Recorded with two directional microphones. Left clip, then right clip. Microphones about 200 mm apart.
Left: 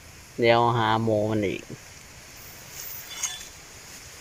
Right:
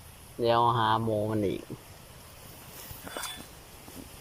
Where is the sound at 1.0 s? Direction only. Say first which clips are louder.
Left 6 dB; 15° left (ahead or behind).